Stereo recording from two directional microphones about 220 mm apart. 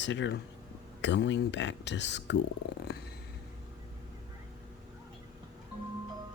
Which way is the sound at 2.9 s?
45° left (ahead or behind).